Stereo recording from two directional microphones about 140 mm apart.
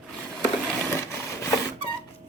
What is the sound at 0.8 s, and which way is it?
Printer, 20° left (ahead or behind).